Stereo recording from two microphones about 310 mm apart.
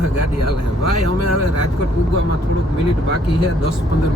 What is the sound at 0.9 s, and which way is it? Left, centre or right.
Speech, left.